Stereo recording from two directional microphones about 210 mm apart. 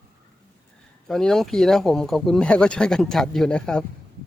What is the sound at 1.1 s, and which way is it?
Speech, centre (ahead or behind).